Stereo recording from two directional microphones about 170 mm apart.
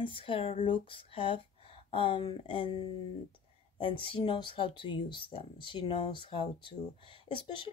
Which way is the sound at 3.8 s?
30° left (ahead or behind).